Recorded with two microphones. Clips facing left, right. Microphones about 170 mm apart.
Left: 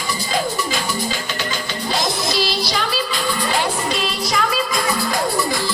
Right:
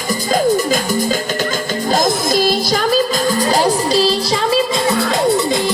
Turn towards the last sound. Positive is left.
turn(degrees=-20)  # may be behind; listen again after turning